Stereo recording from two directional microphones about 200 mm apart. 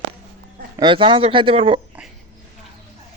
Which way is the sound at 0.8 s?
25° right (ahead or behind).